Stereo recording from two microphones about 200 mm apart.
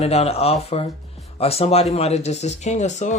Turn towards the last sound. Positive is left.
turn(degrees=35)  # may be behind; listen again after turning